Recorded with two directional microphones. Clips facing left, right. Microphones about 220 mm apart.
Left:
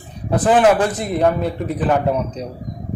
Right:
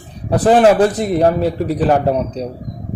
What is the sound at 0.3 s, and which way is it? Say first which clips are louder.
A man's voice: right 3 dB; 35° right (ahead or behind).